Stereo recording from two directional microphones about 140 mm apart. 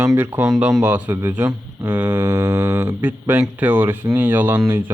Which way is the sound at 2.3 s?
25° right (ahead or behind).